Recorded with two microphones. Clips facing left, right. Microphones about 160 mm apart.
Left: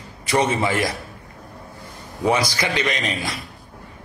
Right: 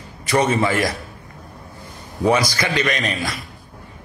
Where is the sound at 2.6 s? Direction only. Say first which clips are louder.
Right 2 dB; 20° left (ahead or behind).